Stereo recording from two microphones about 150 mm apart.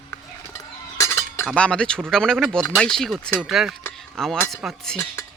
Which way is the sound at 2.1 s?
5° left (ahead or behind).